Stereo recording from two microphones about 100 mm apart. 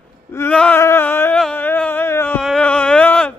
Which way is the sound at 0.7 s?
25° left (ahead or behind).